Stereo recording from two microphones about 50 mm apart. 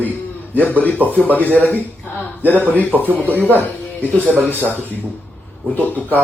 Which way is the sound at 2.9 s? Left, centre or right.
Centre.